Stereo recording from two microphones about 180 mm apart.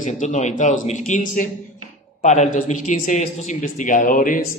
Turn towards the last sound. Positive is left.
turn(degrees=45)  # may be behind; listen again after turning